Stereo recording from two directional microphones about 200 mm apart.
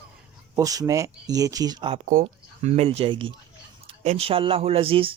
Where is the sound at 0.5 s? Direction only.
15° right (ahead or behind).